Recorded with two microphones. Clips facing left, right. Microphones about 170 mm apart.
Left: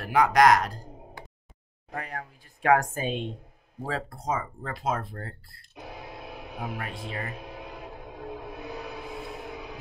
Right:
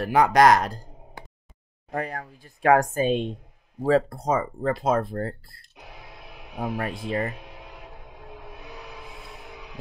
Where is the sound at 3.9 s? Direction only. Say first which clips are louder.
Right 10 dB; 40° right (ahead or behind).